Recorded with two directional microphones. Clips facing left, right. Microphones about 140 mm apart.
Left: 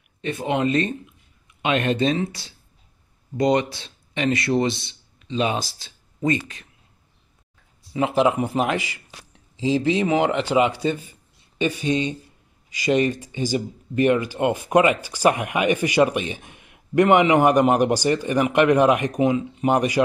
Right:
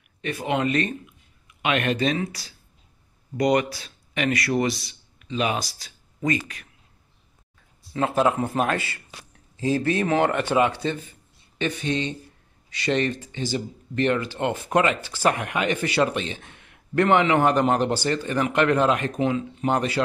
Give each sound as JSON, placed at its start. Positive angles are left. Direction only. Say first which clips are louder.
{"t": 0.2, "sound": "speech", "louder": "left 2 dB", "side_deg": 25}
{"t": 7.9, "sound": "speech", "louder": "left 2 dB", "side_deg": 15}